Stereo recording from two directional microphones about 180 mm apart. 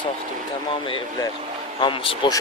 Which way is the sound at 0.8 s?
30° left (ahead or behind).